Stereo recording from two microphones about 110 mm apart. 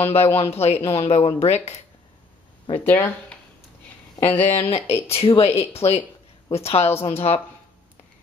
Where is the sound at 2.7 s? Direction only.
20° left (ahead or behind).